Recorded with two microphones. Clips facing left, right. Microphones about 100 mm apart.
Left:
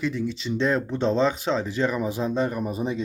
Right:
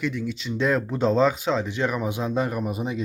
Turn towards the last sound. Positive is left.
turn(degrees=-5)  # may be behind; listen again after turning